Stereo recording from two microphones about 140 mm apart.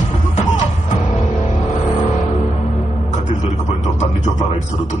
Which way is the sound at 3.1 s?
55° left (ahead or behind).